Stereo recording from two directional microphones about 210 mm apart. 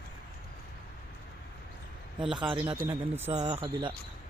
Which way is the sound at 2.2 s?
5° right (ahead or behind).